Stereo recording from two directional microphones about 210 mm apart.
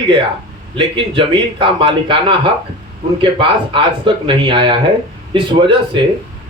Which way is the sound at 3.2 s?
25° right (ahead or behind).